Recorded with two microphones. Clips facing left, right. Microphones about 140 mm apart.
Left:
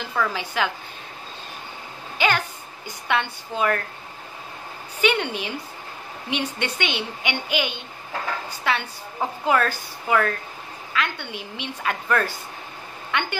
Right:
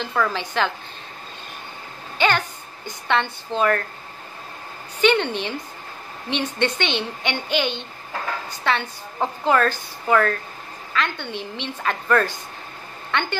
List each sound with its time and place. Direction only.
0.1 s a woman's voice: 10° left (ahead or behind)
2.1 s a sound: 10° left (ahead or behind)
3.1 s a woman's voice: 10° left (ahead or behind)
5.0 s a woman's voice: 10° left (ahead or behind)